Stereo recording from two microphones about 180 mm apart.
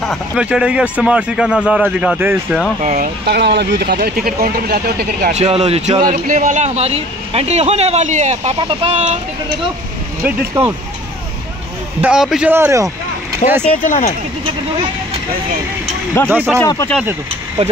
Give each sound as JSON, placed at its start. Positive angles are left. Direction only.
{"t": 0.0, "sound": "speech", "side_deg": 0}
{"t": 2.8, "sound": "speech", "side_deg": -40}
{"t": 3.3, "sound": "speech", "side_deg": -70}
{"t": 5.3, "sound": "speech", "side_deg": -35}
{"t": 8.5, "sound": "speech", "side_deg": -25}
{"t": 10.2, "sound": "speech", "side_deg": -15}
{"t": 12.0, "sound": "speech", "side_deg": -5}
{"t": 13.4, "sound": "speech", "side_deg": 40}
{"t": 16.3, "sound": "speech", "side_deg": -10}
{"t": 16.6, "sound": "speech", "side_deg": 20}